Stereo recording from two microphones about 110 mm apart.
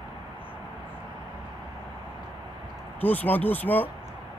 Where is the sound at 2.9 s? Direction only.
15° left (ahead or behind).